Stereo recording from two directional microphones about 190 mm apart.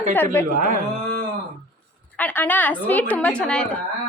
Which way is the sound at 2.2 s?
10° left (ahead or behind).